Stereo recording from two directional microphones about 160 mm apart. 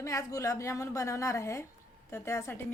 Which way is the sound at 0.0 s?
20° left (ahead or behind).